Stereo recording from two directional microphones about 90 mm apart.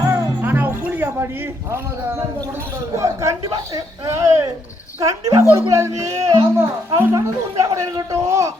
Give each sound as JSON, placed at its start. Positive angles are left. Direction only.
{"t": 0.0, "sound": "music", "side_deg": -25}
{"t": 1.7, "sound": "a man's voice", "side_deg": -30}